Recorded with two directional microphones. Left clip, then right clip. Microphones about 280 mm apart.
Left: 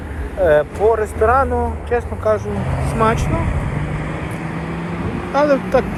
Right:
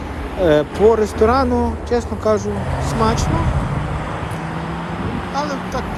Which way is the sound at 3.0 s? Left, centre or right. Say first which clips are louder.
Left 2 dB; centre.